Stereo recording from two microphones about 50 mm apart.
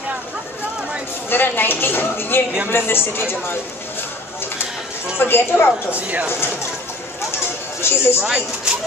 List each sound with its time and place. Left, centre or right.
1.3 s speech: left
5.2 s speech: left
5.9 s speech: right
7.8 s speech: left
8.2 s speech: centre